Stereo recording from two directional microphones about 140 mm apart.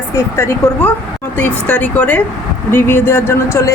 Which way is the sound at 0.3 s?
20° left (ahead or behind).